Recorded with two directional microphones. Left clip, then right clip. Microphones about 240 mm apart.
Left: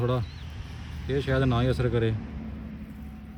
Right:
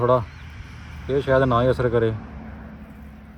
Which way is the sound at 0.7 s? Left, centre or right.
Centre.